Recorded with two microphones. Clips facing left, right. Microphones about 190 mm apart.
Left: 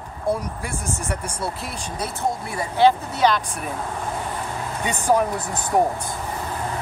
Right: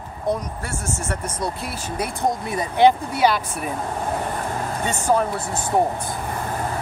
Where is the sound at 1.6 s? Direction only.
5° right (ahead or behind).